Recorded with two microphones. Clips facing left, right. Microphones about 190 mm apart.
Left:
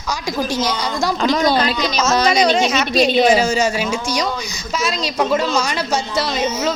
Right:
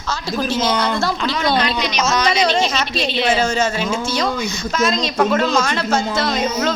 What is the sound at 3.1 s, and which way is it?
Speech, 45° left (ahead or behind).